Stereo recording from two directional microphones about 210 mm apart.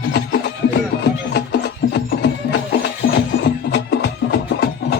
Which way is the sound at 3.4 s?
50° left (ahead or behind).